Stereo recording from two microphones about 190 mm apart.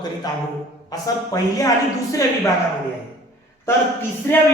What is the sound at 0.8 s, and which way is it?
Speech, 20° left (ahead or behind).